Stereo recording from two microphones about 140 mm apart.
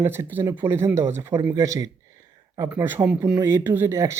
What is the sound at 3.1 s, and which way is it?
Speech, 5° right (ahead or behind).